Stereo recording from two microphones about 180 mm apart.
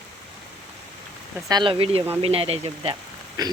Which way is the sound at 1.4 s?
25° right (ahead or behind).